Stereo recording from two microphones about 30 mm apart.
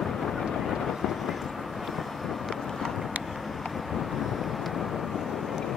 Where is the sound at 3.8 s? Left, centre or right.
Centre.